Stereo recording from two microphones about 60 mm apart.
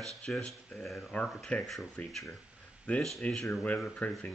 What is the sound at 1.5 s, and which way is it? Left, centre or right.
Speech, left.